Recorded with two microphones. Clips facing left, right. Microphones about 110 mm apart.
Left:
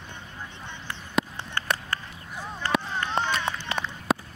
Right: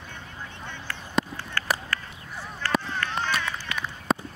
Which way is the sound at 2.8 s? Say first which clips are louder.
Left 2 dB; 20° left (ahead or behind).